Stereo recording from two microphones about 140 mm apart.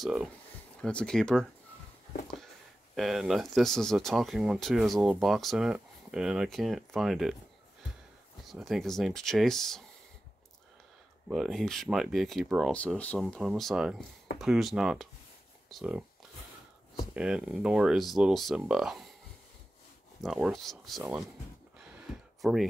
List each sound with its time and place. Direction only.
0.0 s speech: 5° right (ahead or behind)
0.7 s speech: 5° left (ahead or behind)
3.0 s speech: centre (ahead or behind)
8.5 s speech: centre (ahead or behind)
11.2 s speech: centre (ahead or behind)
12.7 s speech: 10° left (ahead or behind)
13.2 s speech: centre (ahead or behind)
17.1 s speech: 5° right (ahead or behind)
20.2 s speech: 5° right (ahead or behind)
21.7 s a sound: 5° right (ahead or behind)